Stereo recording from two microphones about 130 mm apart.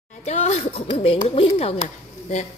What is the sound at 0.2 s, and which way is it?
Speech, 60° left (ahead or behind).